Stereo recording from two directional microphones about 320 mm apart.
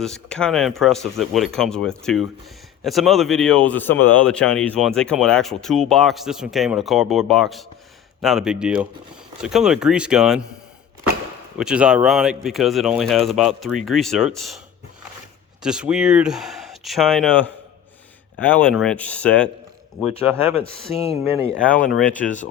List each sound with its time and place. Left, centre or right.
0.0 s speech: centre
11.5 s speech: centre
15.6 s speech: centre
20.4 s speech: centre
22.0 s speech: left